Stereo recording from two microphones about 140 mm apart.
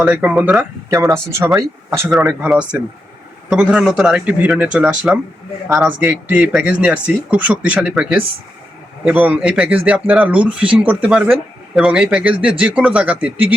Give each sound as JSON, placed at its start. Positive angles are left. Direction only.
{"t": 0.0, "sound": "a man's voice", "side_deg": -10}
{"t": 0.9, "sound": "speech", "side_deg": -20}
{"t": 2.5, "sound": "a man's voice", "side_deg": -10}